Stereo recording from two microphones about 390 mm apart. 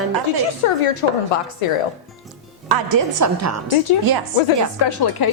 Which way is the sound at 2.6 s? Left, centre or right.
Right.